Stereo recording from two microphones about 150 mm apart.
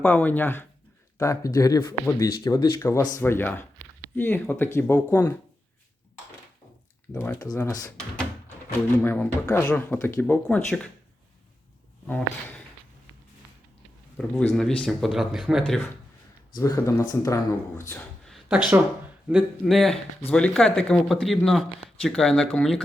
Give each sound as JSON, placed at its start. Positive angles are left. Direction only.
{"t": 0.0, "sound": "speech", "side_deg": 10}
{"t": 7.2, "sound": "speech", "side_deg": 15}
{"t": 12.0, "sound": "speech", "side_deg": 10}
{"t": 14.2, "sound": "speech", "side_deg": 0}
{"t": 16.6, "sound": "speech", "side_deg": 20}
{"t": 18.3, "sound": "a sound", "side_deg": -5}
{"t": 19.6, "sound": "speech", "side_deg": 0}